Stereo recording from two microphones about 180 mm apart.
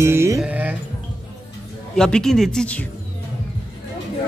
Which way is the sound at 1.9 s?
5° left (ahead or behind).